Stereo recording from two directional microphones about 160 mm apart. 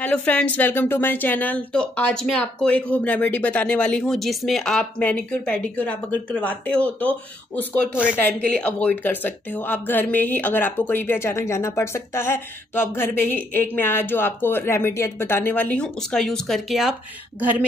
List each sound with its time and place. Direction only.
0.0 s a woman's voice: 10° left (ahead or behind); by 17.6 s 10° right (ahead or behind)